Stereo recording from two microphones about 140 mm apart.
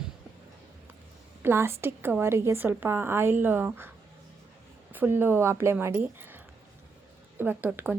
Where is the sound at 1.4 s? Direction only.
15° right (ahead or behind).